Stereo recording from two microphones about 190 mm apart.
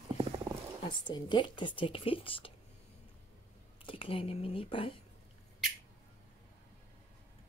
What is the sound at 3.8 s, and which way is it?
Speech, 30° left (ahead or behind).